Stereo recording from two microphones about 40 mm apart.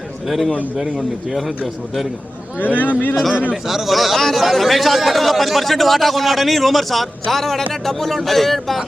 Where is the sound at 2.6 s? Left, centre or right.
Left.